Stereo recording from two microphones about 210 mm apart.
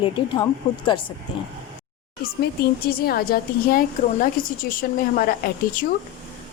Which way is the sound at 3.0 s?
45° left (ahead or behind).